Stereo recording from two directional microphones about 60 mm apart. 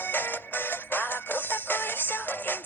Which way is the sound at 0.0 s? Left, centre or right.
Left.